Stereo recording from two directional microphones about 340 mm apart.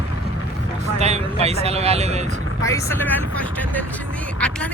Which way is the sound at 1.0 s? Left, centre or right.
Centre.